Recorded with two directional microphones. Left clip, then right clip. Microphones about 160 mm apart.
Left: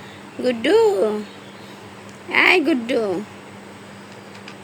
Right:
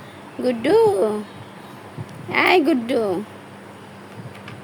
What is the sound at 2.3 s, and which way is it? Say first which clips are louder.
Speech: left 1 dB; 5° right (ahead or behind).